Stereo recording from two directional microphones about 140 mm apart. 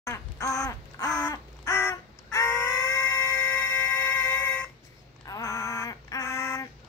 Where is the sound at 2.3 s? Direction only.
15° left (ahead or behind).